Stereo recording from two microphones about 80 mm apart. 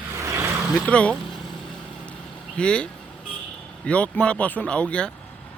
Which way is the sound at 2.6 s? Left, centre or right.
Centre.